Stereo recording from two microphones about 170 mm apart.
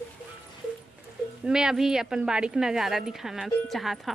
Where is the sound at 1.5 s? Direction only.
5° right (ahead or behind).